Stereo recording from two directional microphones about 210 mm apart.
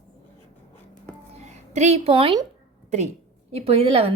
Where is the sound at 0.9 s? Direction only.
35° right (ahead or behind).